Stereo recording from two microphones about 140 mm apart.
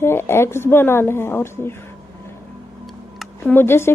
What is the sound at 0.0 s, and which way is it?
A woman's voice, 15° left (ahead or behind).